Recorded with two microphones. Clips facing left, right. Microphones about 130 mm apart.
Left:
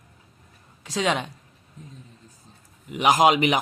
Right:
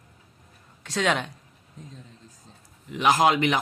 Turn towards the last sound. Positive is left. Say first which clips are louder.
# left 2 dB
turn(degrees=15)  # may be behind; listen again after turning